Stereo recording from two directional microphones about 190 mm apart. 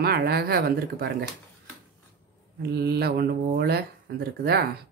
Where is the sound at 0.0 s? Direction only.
55° right (ahead or behind).